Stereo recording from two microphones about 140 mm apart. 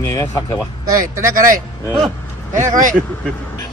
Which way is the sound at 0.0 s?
20° left (ahead or behind).